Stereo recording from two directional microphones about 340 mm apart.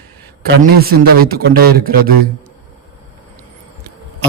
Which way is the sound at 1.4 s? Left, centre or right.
Right.